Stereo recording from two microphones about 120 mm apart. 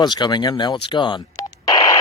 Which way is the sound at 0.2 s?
35° left (ahead or behind).